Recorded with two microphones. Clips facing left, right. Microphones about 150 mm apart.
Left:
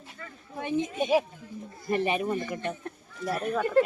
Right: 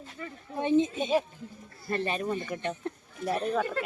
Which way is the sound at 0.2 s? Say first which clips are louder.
Right 5 dB; 25° right (ahead or behind).